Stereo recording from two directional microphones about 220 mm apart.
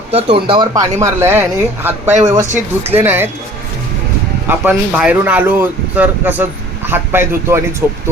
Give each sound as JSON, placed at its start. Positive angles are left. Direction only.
{"t": 0.1, "sound": "speech", "side_deg": -25}
{"t": 4.4, "sound": "speech", "side_deg": -5}